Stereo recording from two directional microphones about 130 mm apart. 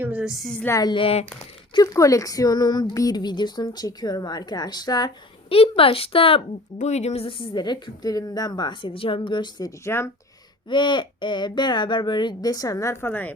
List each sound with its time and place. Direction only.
0.0 s a woman's voice: 10° right (ahead or behind)
0.6 s a woman's voice: 20° left (ahead or behind)
0.9 s speech: 45° left (ahead or behind)
1.7 s speech: 30° left (ahead or behind)
5.5 s speech: 45° left (ahead or behind)
6.7 s speech: 60° left (ahead or behind); by 10.1 s 20° left (ahead or behind)
10.7 s speech: 35° left (ahead or behind); by 13.3 s 15° left (ahead or behind)